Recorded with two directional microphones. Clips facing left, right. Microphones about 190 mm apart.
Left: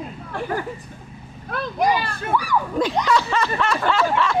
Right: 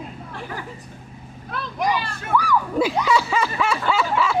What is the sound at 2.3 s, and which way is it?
Speech, 25° left (ahead or behind).